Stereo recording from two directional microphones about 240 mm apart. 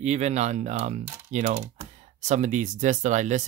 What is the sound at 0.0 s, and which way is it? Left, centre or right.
Speech, right.